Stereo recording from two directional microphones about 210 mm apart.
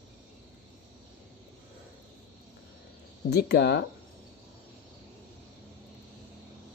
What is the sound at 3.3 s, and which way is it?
Speech, 50° left (ahead or behind).